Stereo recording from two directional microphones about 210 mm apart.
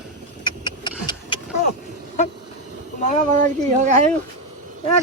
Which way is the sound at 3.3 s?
35° right (ahead or behind).